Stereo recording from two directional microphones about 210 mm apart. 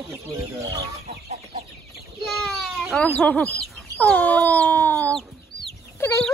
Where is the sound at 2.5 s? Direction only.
Centre (ahead or behind).